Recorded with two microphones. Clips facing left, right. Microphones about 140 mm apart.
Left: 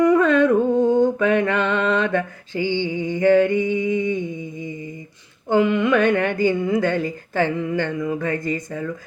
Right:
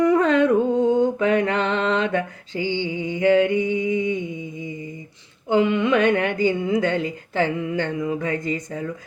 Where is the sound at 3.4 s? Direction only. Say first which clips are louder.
Left 1 dB; 20° right (ahead or behind).